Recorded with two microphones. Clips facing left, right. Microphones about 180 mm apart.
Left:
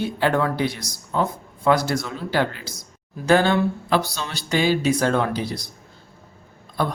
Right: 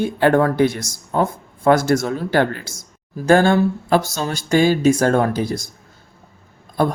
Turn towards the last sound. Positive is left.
turn(degrees=-50)  # may be behind; listen again after turning